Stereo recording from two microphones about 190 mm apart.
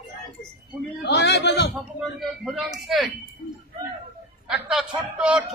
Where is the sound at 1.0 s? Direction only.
60° left (ahead or behind).